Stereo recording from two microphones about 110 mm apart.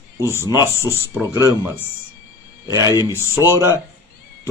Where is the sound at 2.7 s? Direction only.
35° left (ahead or behind).